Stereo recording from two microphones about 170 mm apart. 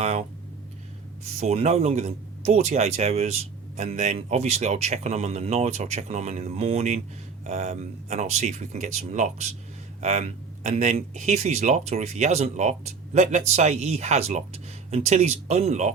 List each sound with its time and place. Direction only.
0.0 s speech: 45° right (ahead or behind)
1.4 s speech: 40° right (ahead or behind)